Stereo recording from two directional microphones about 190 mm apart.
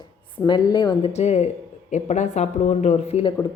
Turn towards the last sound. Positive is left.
turn(degrees=35)  # may be behind; listen again after turning